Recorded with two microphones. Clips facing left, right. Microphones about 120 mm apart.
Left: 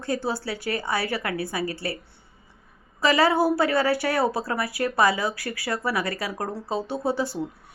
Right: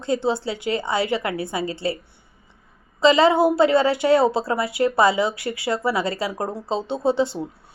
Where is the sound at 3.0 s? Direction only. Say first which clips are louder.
Right 5 dB; 20° right (ahead or behind).